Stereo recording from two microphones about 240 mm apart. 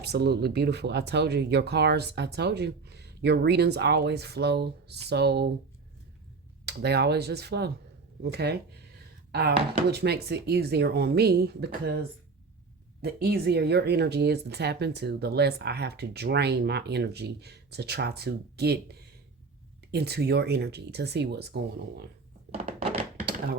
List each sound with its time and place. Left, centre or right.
0.0 s speech: right
6.7 s speech: right